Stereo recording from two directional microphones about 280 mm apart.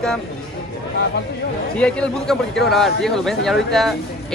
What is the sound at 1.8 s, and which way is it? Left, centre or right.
Speech, centre.